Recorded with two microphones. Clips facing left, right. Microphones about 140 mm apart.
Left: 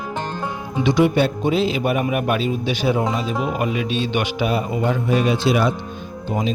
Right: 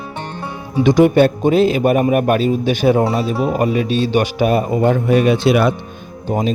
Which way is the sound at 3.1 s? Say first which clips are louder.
Right 5 dB; 40° right (ahead or behind).